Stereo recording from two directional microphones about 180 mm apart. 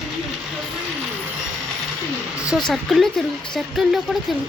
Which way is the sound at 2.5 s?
Centre (ahead or behind).